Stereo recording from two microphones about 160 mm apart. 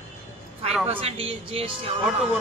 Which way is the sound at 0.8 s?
35° right (ahead or behind).